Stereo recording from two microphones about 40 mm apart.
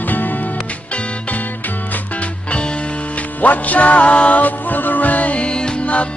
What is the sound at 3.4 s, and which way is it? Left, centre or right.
Music, left.